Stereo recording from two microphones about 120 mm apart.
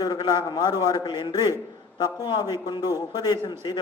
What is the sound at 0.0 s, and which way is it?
A man's voice, 35° left (ahead or behind).